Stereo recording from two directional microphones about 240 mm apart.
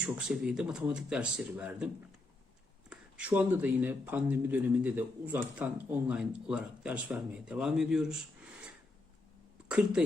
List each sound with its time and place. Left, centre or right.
0.0 s speech: centre
2.9 s speech: centre